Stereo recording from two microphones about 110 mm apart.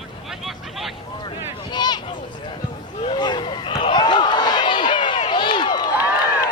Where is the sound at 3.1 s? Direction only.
45° left (ahead or behind).